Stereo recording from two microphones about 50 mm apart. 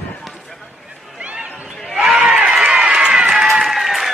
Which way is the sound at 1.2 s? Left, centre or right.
Right.